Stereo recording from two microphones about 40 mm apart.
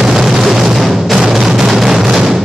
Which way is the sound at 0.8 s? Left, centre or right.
Centre.